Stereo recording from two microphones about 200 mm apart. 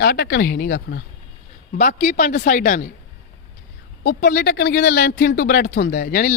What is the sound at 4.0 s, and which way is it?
Speech, 45° left (ahead or behind).